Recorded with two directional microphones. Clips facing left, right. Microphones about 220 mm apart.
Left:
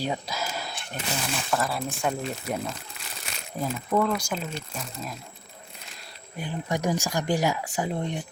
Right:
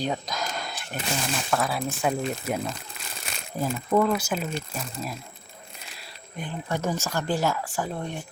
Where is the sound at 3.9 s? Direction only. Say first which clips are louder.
Right 3 dB; 5° right (ahead or behind).